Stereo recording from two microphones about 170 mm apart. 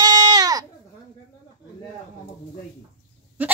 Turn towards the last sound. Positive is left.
turn(degrees=-10)  # may be behind; listen again after turning